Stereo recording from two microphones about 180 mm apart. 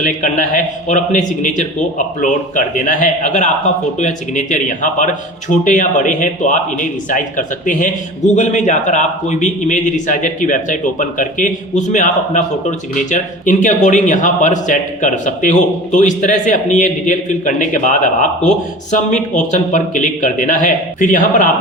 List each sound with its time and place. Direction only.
0.0 s a man's voice: 45° left (ahead or behind)